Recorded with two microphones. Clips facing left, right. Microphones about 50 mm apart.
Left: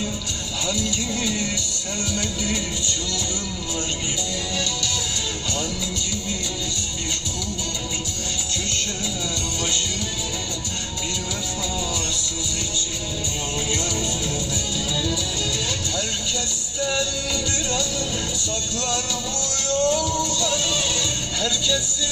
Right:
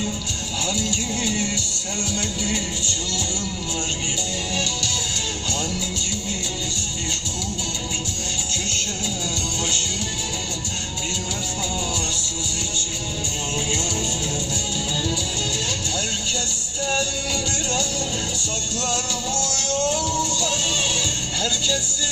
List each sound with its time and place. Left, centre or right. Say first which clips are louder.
0.7 s music: left 1 dB; right
16.8 s music: even; right
19.4 s music: left 3 dB; left
20.4 s music: left 1 dB; right